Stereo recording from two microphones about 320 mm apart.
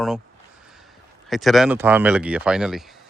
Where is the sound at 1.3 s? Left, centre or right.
Centre.